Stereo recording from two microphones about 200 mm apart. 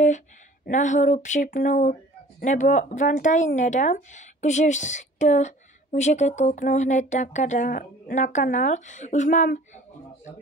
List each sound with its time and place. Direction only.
0.7 s speech: 35° left (ahead or behind)